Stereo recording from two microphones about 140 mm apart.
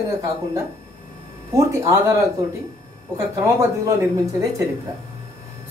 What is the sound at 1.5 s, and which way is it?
Speech, 20° right (ahead or behind).